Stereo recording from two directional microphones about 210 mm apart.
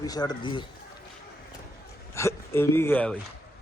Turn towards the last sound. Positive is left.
turn(degrees=5)  # may be behind; listen again after turning